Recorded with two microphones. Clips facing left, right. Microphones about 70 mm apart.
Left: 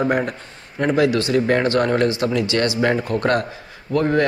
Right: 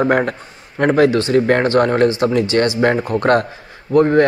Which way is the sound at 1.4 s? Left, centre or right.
Right.